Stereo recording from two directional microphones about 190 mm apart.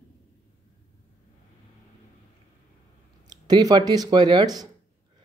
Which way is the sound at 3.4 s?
20° right (ahead or behind).